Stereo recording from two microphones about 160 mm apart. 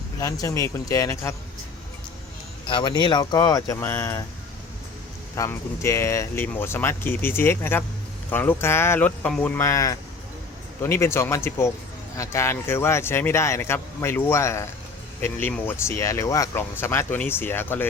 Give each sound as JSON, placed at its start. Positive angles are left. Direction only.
{"t": 0.2, "sound": "speech", "side_deg": 20}
{"t": 2.6, "sound": "speech", "side_deg": 30}
{"t": 5.4, "sound": "speech", "side_deg": 20}